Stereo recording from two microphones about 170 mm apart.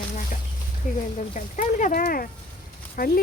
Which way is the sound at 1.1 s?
45° left (ahead or behind).